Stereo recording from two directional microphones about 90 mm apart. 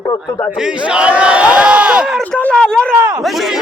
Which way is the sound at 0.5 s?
10° right (ahead or behind).